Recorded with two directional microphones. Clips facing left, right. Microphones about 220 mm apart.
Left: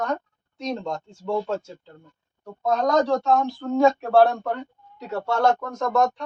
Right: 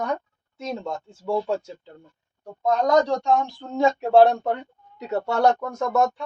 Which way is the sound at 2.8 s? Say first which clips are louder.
Even; 15° right (ahead or behind).